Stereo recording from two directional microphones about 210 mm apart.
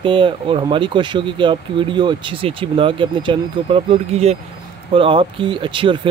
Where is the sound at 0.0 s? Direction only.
25° right (ahead or behind).